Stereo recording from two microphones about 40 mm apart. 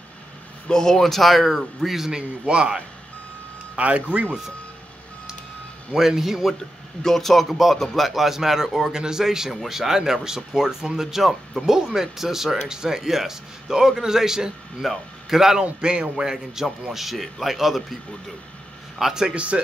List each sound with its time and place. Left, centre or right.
0.7 s a man's voice: centre; by 4.3 s right
5.9 s a man's voice: centre
7.0 s a man's voice: centre
8.9 s a man's voice: centre
15.8 s a man's voice: right; by 17.8 s centre
18.9 s a man's voice: centre
19.3 s speech: right